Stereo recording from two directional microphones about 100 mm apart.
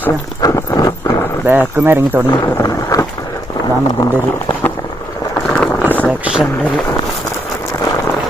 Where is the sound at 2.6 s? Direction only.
25° left (ahead or behind).